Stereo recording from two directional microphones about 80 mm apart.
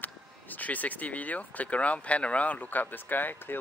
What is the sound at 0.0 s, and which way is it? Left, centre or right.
Speech, left.